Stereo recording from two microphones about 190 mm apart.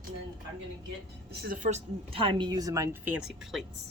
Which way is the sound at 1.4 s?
40° right (ahead or behind).